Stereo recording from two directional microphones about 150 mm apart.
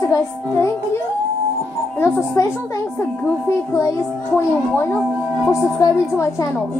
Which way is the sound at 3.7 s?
25° left (ahead or behind).